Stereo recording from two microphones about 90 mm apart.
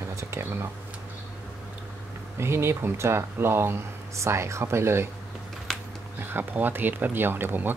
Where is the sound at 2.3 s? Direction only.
30° right (ahead or behind).